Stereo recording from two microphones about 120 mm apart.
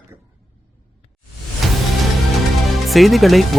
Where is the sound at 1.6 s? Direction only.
Centre (ahead or behind).